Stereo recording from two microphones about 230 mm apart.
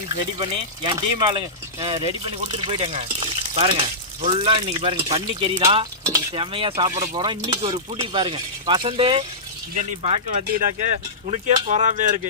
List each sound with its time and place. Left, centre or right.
0.9 s speech: right
10.3 s speech: right